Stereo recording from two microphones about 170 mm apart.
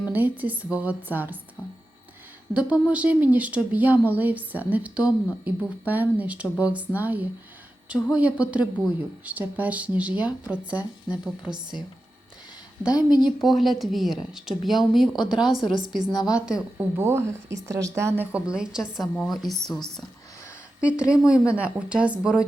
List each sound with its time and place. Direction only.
0.1 s speech: 10° right (ahead or behind)
2.5 s speech: 5° right (ahead or behind)
12.9 s speech: 25° left (ahead or behind)
13.2 s speech: centre (ahead or behind)